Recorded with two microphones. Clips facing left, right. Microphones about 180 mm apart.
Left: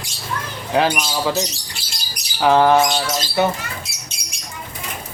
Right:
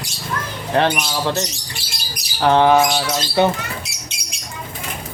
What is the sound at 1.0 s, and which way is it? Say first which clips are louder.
Speech: even; 5° left (ahead or behind).